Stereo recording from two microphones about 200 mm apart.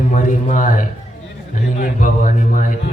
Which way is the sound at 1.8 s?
40° left (ahead or behind).